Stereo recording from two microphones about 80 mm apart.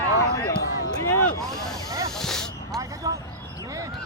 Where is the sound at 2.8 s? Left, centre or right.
Right.